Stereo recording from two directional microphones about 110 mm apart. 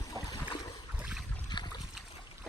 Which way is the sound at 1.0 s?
10° right (ahead or behind).